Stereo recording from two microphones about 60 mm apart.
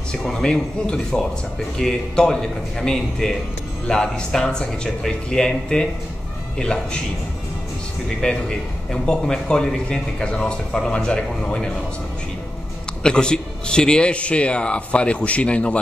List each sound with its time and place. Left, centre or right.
0.1 s a man's voice: centre
8.2 s a man's voice: centre
13.0 s a man's voice: centre